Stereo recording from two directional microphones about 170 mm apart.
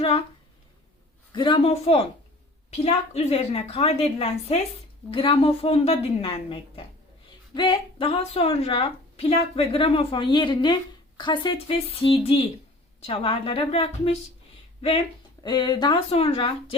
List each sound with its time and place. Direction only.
0.0 s a woman's voice: 35° left (ahead or behind)
1.3 s a woman's voice: 30° left (ahead or behind)